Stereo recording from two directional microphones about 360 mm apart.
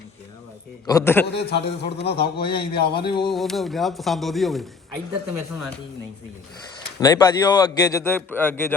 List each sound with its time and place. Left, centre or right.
0.9 s speech: centre
1.3 s a man's voice: left
2.1 s speech: centre
2.8 s a man's voice: left
3.1 s speech: centre
3.3 s speech: centre
7.0 s speech: centre